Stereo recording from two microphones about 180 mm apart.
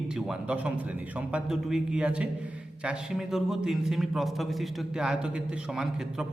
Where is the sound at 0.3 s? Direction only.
5° right (ahead or behind).